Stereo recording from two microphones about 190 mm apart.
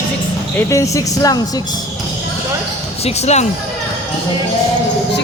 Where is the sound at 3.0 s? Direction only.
35° left (ahead or behind).